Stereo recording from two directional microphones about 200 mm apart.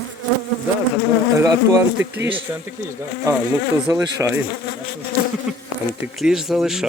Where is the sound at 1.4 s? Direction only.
15° right (ahead or behind).